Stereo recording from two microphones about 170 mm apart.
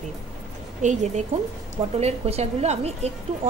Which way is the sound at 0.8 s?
45° right (ahead or behind).